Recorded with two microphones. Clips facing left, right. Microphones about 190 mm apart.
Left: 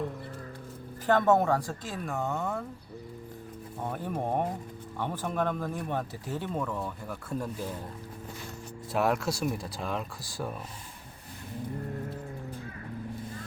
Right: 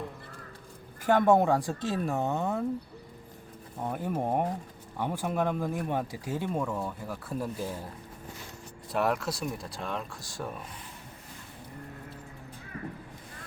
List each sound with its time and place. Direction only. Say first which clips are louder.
1.0 s speech: right 1 dB; 15° right (ahead or behind)
3.8 s speech: right 2 dB; 10° right (ahead or behind)
8.9 s speech: left 1 dB; centre (ahead or behind)